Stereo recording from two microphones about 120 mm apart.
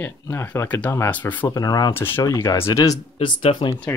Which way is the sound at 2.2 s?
30° left (ahead or behind).